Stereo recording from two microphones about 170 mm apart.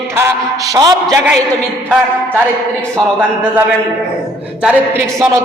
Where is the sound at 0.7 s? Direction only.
20° right (ahead or behind).